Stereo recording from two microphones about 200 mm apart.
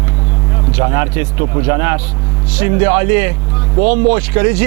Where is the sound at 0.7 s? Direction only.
15° right (ahead or behind).